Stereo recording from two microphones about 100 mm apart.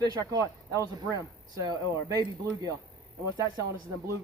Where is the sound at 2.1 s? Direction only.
35° right (ahead or behind).